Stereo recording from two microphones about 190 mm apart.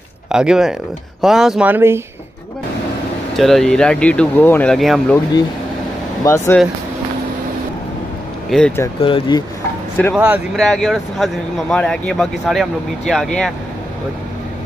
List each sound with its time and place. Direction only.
0.3 s speech: 5° right (ahead or behind)
3.3 s speech: centre (ahead or behind)
6.2 s speech: 15° left (ahead or behind)
8.5 s speech: 5° left (ahead or behind)
9.0 s speech: 25° left (ahead or behind)
10.1 s speech: 5° right (ahead or behind)